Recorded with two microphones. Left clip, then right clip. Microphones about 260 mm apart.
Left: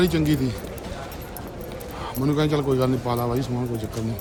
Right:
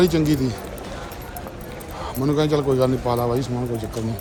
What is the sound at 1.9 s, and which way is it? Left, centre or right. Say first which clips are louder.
Speech: right 3 dB; centre.